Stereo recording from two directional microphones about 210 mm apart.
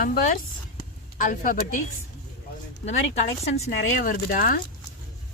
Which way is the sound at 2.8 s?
30° left (ahead or behind).